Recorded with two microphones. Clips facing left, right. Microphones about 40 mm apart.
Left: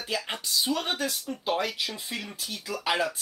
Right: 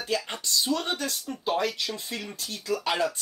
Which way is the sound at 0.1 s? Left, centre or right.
Centre.